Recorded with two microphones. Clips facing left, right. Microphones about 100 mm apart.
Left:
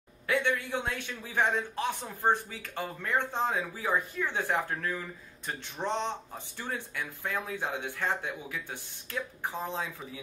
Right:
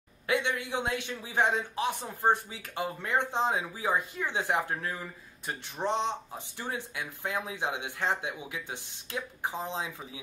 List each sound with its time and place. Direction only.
0.3 s a man's voice: 20° right (ahead or behind)